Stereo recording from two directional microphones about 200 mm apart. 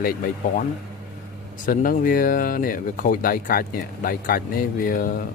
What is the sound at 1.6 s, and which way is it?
Speech, 45° left (ahead or behind).